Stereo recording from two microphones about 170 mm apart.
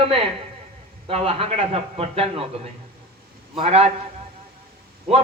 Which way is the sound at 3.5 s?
35° right (ahead or behind).